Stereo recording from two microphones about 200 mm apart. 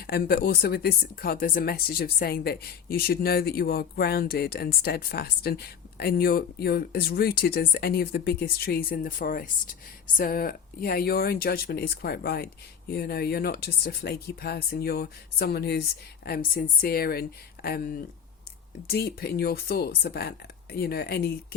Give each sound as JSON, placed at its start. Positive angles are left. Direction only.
{"t": 0.0, "sound": "speech", "side_deg": 50}